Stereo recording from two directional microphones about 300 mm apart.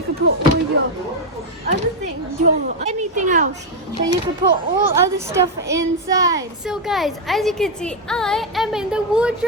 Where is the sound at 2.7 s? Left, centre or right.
Right.